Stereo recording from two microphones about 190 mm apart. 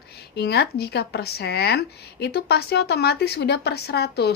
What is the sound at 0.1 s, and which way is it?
Speech, 55° left (ahead or behind).